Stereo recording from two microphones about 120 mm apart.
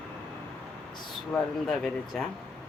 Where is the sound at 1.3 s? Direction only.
5° left (ahead or behind).